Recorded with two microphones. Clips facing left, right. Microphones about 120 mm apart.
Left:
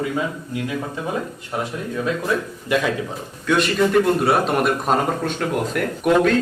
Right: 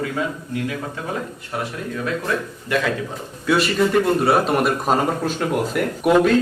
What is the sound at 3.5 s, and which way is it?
A man's voice, centre (ahead or behind).